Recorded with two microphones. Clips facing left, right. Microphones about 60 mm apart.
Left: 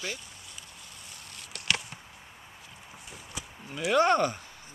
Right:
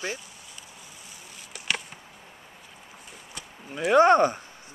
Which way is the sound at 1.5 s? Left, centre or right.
Centre.